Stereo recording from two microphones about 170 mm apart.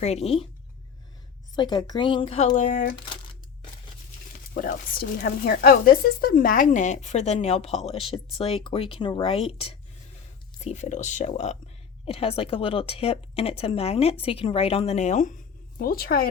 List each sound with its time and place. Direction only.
0.0 s speech: 40° left (ahead or behind)
1.5 s speech: 25° left (ahead or behind); by 2.9 s 50° left (ahead or behind)
4.5 s speech: 55° left (ahead or behind)
15.8 s a woman's voice: 60° left (ahead or behind)